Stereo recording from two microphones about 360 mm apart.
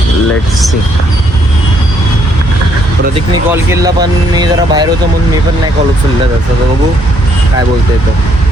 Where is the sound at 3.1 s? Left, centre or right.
Centre.